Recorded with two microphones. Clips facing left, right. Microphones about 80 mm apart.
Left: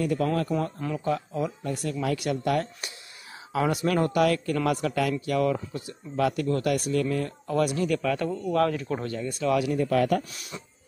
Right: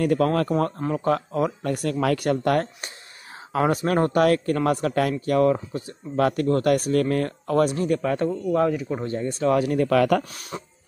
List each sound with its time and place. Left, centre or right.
0.0 s speech: right
2.1 s speech: right
7.6 s speech: right
8.5 s speech: centre
9.0 s speech: right
9.7 s speech: right
10.3 s speech: right